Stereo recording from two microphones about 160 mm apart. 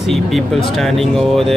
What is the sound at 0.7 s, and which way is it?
Speech, centre (ahead or behind).